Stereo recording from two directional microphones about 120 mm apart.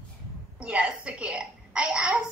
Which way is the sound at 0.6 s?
10° right (ahead or behind).